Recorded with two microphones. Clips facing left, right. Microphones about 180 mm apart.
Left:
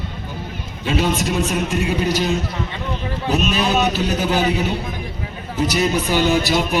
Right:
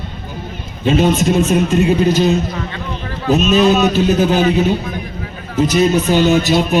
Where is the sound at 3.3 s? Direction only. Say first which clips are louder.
Right 8 dB; 15° left (ahead or behind).